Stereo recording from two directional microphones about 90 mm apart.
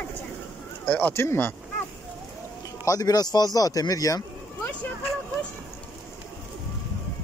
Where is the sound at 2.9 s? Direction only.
45° left (ahead or behind).